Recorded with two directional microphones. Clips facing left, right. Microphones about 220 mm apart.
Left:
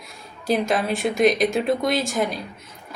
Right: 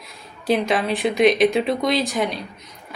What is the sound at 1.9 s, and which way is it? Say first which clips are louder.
Speech: right 2 dB; 50° left (ahead or behind).